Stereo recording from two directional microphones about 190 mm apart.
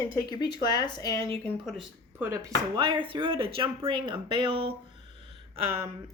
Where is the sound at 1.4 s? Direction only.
Centre (ahead or behind).